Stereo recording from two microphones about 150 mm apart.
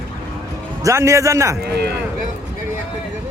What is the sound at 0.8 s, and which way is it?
Speech, 20° right (ahead or behind).